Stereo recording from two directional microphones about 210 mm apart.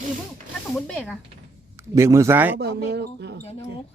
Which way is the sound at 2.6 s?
50° right (ahead or behind).